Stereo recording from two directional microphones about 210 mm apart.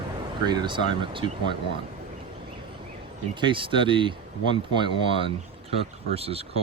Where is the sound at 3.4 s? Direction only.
25° right (ahead or behind).